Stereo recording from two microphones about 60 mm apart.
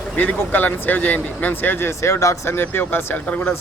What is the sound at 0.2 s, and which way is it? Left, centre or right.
Speech, left.